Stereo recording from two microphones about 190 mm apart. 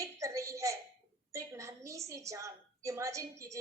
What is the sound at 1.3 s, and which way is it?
A woman's voice, 15° right (ahead or behind).